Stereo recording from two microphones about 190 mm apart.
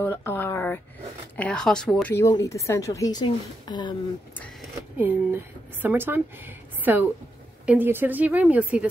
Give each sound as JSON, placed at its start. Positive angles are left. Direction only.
{"t": 0.0, "sound": "a woman's voice", "side_deg": 10}
{"t": 2.1, "sound": "a woman's voice", "side_deg": 15}
{"t": 4.9, "sound": "a woman's voice", "side_deg": -10}